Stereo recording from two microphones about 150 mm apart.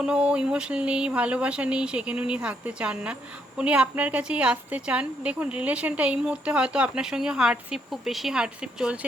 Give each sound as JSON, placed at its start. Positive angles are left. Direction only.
{"t": 0.0, "sound": "a woman's voice", "side_deg": -5}